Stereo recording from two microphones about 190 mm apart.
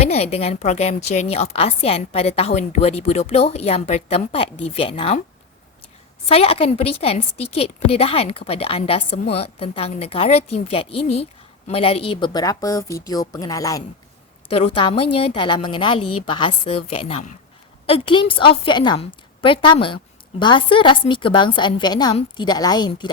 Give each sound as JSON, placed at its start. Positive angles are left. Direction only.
{"t": 0.1, "sound": "a woman's voice", "side_deg": 35}
{"t": 6.2, "sound": "a woman's voice", "side_deg": 30}
{"t": 14.4, "sound": "a woman's voice", "side_deg": 30}